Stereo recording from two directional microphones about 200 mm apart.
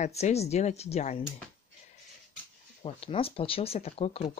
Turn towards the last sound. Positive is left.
turn(degrees=30)  # may be behind; listen again after turning